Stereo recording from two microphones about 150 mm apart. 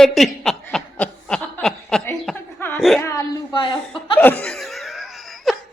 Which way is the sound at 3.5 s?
35° left (ahead or behind).